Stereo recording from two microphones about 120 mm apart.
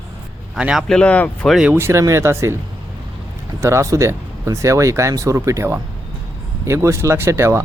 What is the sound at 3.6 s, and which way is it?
Speech, 25° right (ahead or behind).